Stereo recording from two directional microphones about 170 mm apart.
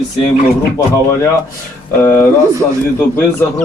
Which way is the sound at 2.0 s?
15° left (ahead or behind).